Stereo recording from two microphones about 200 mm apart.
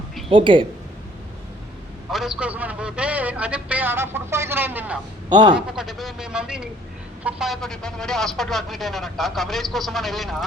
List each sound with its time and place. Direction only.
0.3 s speech: 25° right (ahead or behind)
2.0 s a man's voice: centre (ahead or behind)
5.3 s speech: 20° right (ahead or behind)
5.5 s a man's voice: centre (ahead or behind)